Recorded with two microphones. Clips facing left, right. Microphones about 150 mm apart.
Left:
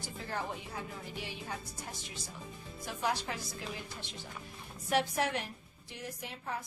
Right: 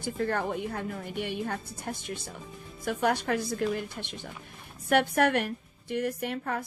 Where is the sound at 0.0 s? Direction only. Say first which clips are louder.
Right 10 dB; 60° right (ahead or behind).